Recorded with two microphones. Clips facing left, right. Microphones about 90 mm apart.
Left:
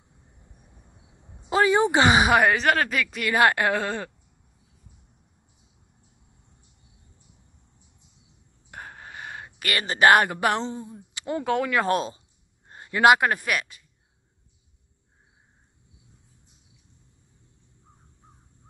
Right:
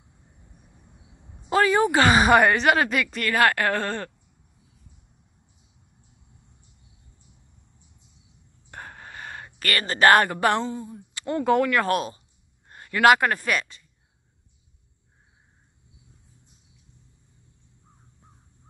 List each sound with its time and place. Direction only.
1.5 s speech: 20° left (ahead or behind)
2.3 s a woman's voice: centre (ahead or behind)
3.3 s speech: 20° left (ahead or behind)
8.6 s a sound: 5° left (ahead or behind)
10.6 s speech: 20° left (ahead or behind)
11.1 s a sound: 15° left (ahead or behind)
11.6 s speech: 15° left (ahead or behind)
11.9 s speech: 25° left (ahead or behind); by 13.8 s 5° left (ahead or behind)